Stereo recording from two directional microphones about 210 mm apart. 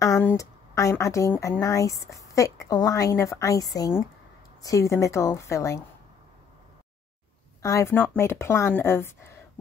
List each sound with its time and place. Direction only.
0.0 s a woman's voice: 10° left (ahead or behind)
7.6 s speech: 15° left (ahead or behind)